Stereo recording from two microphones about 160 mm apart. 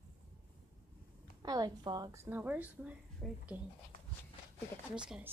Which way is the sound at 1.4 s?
25° right (ahead or behind).